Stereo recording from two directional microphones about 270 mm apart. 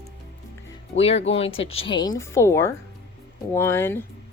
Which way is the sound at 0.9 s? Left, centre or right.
Left.